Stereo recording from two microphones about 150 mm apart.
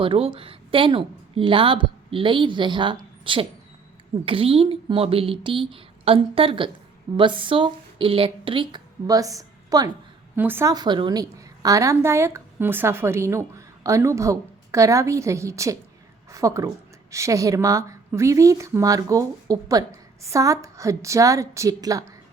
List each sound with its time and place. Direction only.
0.0 s a woman's voice: 35° right (ahead or behind)
10.3 s a woman's voice: 15° right (ahead or behind)
10.7 s a woman's voice: 30° right (ahead or behind)